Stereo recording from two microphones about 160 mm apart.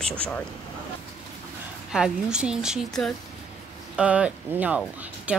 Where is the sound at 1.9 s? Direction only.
5° right (ahead or behind).